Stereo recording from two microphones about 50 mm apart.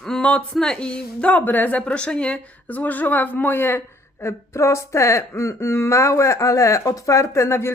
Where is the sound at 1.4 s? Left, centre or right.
Left.